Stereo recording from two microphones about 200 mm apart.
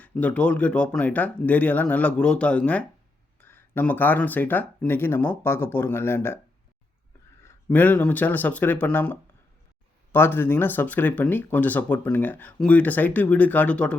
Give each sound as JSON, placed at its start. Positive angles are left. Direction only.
{"t": 0.0, "sound": "speech", "side_deg": 5}
{"t": 7.4, "sound": "speech", "side_deg": 10}